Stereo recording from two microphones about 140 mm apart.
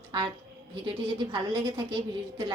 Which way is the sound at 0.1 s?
35° right (ahead or behind).